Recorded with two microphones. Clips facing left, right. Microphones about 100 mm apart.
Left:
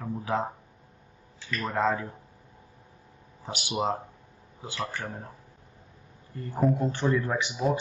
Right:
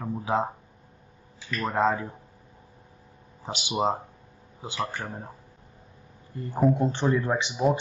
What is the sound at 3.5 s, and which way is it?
Speech, 20° right (ahead or behind).